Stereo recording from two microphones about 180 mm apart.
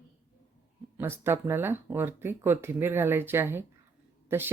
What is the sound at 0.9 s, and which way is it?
Speech, 15° right (ahead or behind).